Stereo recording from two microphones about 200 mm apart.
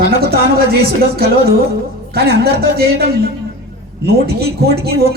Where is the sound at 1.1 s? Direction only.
50° right (ahead or behind).